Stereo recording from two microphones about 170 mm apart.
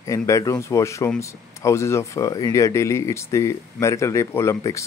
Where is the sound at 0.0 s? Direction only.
20° left (ahead or behind).